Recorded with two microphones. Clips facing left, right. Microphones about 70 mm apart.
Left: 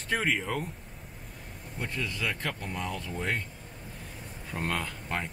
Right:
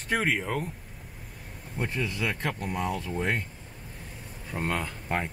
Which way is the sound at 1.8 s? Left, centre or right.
Centre.